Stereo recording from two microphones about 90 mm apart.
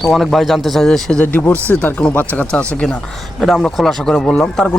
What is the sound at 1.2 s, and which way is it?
Speech, 20° left (ahead or behind).